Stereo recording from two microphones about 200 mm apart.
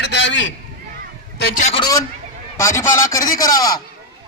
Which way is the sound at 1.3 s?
50° left (ahead or behind).